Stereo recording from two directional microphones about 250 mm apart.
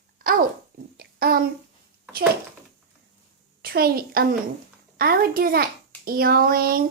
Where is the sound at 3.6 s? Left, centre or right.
Right.